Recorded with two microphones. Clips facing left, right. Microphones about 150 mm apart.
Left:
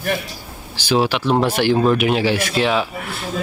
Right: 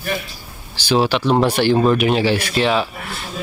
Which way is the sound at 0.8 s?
10° left (ahead or behind).